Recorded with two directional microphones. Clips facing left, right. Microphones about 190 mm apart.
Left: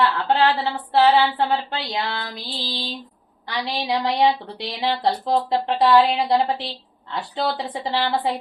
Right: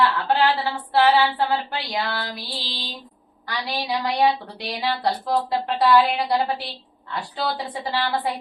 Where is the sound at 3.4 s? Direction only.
20° left (ahead or behind).